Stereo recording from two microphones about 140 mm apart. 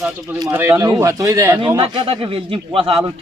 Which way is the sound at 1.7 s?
40° right (ahead or behind).